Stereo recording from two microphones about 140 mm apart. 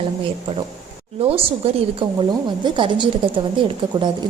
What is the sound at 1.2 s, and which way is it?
Speech, 45° right (ahead or behind).